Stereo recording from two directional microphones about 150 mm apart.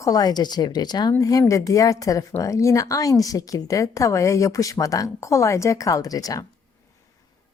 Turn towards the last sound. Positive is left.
turn(degrees=25)  # may be behind; listen again after turning